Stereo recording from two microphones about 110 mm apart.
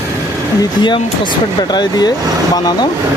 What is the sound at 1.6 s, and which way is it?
Speech, 40° left (ahead or behind).